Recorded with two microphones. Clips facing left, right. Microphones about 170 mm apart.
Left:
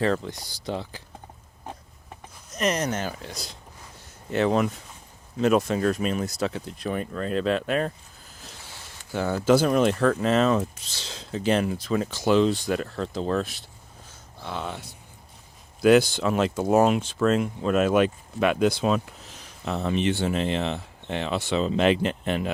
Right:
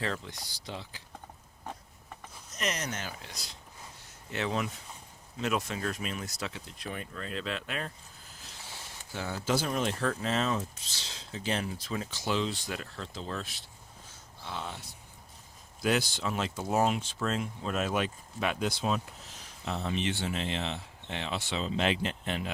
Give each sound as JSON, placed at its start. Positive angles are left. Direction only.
{"t": 0.0, "sound": "speech", "side_deg": 50}
{"t": 2.6, "sound": "speech", "side_deg": 50}
{"t": 4.3, "sound": "speech", "side_deg": 50}
{"t": 9.1, "sound": "speech", "side_deg": 60}
{"t": 14.4, "sound": "speech", "side_deg": 65}
{"t": 19.6, "sound": "speech", "side_deg": 60}